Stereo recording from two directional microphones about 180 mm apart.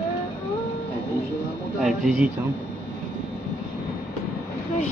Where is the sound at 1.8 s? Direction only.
Centre (ahead or behind).